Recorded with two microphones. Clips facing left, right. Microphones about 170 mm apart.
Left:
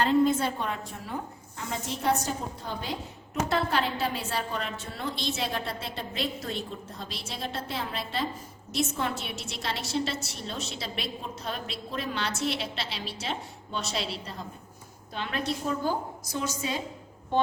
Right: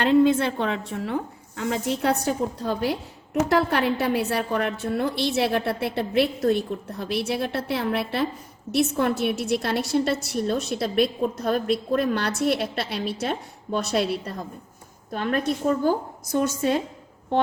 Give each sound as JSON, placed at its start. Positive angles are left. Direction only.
{"t": 0.1, "sound": "a woman's voice", "side_deg": -90}